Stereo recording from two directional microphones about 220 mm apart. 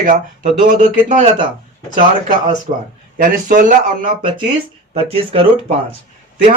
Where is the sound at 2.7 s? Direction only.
30° right (ahead or behind).